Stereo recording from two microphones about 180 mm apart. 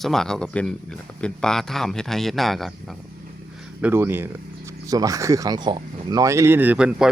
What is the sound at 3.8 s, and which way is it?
Speech, 10° right (ahead or behind).